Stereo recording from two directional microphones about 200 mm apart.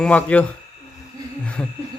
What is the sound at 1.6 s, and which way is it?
Speech, 5° left (ahead or behind).